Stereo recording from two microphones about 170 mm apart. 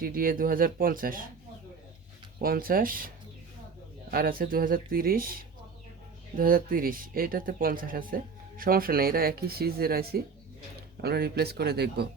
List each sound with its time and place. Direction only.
0.0 s speech: 55° right (ahead or behind)
2.4 s speech: 60° right (ahead or behind)
4.1 s speech: 60° right (ahead or behind)